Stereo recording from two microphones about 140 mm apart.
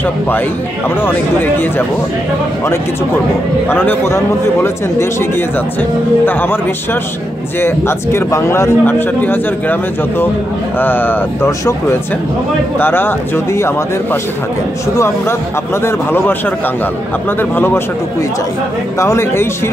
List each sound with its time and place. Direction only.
1.0 s a man's voice: 15° left (ahead or behind)
3.6 s a man's voice: 15° left (ahead or behind)
5.8 s a man's voice: 15° left (ahead or behind)
12.7 s a man's voice: 15° left (ahead or behind)
15.0 s a man's voice: 20° left (ahead or behind)
18.9 s speech: 20° left (ahead or behind)